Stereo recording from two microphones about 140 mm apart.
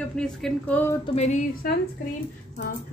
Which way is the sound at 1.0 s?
50° left (ahead or behind).